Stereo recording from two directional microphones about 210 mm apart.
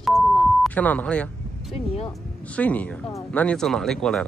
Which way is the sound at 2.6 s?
5° left (ahead or behind).